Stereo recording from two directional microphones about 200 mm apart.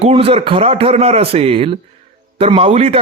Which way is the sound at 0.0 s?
30° right (ahead or behind).